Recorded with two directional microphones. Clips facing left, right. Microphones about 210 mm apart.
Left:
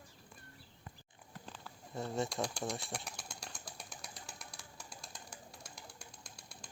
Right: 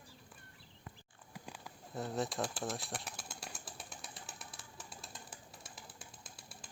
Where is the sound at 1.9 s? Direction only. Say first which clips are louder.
Even; centre (ahead or behind).